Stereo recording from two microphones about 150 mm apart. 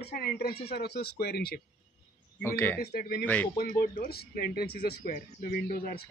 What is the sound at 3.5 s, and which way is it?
A man's voice, 90° left.